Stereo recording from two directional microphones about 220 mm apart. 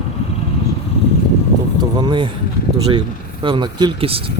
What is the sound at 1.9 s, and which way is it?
Vehicle, 20° right (ahead or behind).